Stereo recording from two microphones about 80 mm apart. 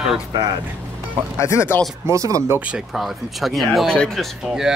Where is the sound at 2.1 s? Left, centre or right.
Right.